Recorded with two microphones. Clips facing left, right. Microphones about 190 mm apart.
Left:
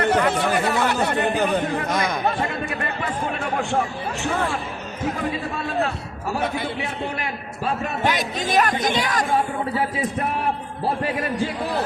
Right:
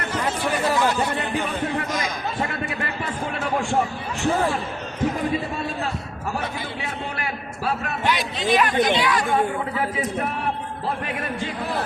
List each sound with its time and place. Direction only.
0.1 s speech: 60° left (ahead or behind)
1.9 s a sound: 60° left (ahead or behind)
8.0 s speech: 45° left (ahead or behind)